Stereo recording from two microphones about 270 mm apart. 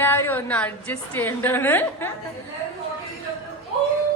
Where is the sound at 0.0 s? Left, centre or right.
Centre.